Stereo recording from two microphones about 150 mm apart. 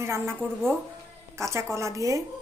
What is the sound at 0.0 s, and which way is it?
Speech, 15° right (ahead or behind).